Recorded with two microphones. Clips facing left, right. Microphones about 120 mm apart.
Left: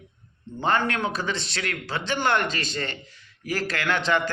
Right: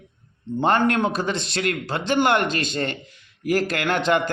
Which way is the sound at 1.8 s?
20° right (ahead or behind).